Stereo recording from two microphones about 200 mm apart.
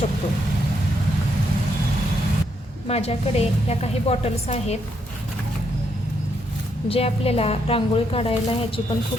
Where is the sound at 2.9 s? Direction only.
30° left (ahead or behind).